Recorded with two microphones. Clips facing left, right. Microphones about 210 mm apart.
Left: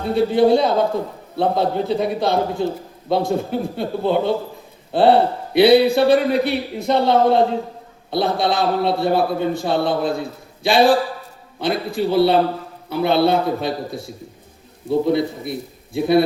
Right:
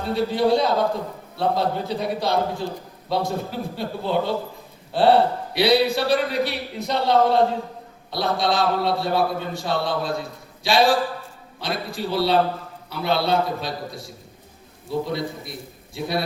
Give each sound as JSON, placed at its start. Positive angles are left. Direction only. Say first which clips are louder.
{"t": 0.1, "sound": "a man's voice", "louder": "left 5 dB", "side_deg": 55}